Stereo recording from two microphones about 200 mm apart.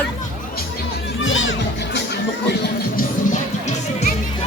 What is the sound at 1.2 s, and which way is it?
Music, 75° left (ahead or behind).